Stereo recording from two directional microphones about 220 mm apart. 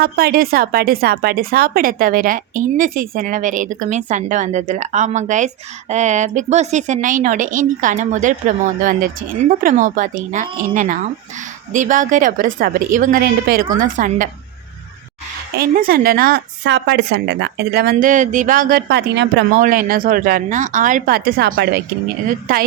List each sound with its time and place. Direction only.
0.0 s speech: 45° right (ahead or behind)
15.5 s a woman's voice: 40° right (ahead or behind)
19.6 s speech: 40° right (ahead or behind)